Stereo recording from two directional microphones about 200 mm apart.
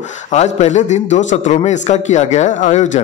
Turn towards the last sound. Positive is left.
turn(degrees=35)  # may be behind; listen again after turning